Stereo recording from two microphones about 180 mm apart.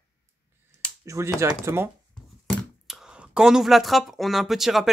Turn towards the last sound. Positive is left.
turn(degrees=0)  # may be behind; listen again after turning